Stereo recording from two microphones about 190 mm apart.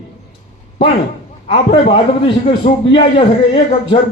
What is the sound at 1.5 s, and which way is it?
A man's voice, 25° left (ahead or behind).